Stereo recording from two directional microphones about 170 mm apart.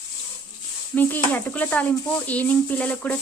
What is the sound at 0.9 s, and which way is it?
A woman's voice, 10° left (ahead or behind).